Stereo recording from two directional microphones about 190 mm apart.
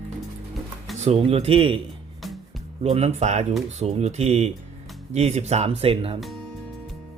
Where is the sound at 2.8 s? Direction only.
30° right (ahead or behind).